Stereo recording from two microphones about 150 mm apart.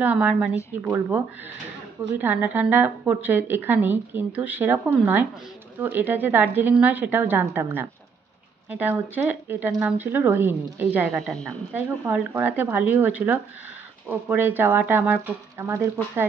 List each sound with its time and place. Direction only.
0.0 s speech: 10° right (ahead or behind)
11.1 s a woman's voice: 5° left (ahead or behind)
11.7 s speech: 10° right (ahead or behind)